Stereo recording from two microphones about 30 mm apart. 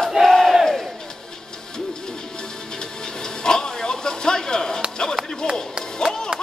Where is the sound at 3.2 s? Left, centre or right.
Left.